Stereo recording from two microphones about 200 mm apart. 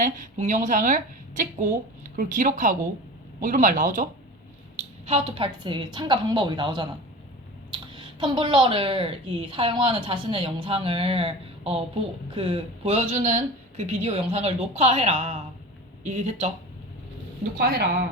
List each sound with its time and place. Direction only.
0.0 s speech: 40° right (ahead or behind)
17.6 s a woman's voice: 50° right (ahead or behind)